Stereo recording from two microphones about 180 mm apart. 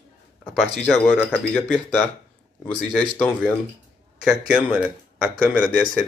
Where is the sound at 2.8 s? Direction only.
Centre (ahead or behind).